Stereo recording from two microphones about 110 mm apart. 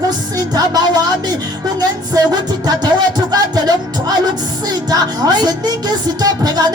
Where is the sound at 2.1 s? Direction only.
35° right (ahead or behind).